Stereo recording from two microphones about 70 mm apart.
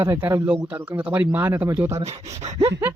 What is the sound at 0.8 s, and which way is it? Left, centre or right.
Speech, right.